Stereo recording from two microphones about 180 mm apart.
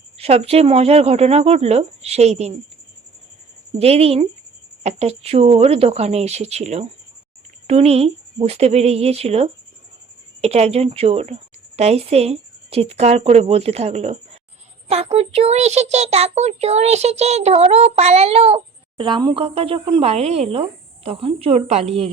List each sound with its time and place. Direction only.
0.2 s a child's voice: 35° right (ahead or behind)
3.8 s a child's voice: 35° right (ahead or behind)